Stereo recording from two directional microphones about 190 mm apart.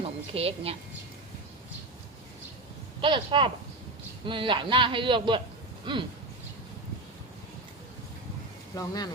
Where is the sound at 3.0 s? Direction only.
25° right (ahead or behind).